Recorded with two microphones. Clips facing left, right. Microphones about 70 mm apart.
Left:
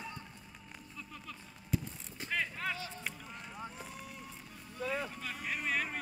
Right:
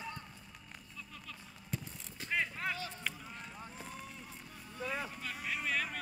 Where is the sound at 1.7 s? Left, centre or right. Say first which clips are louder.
Left 6 dB; centre.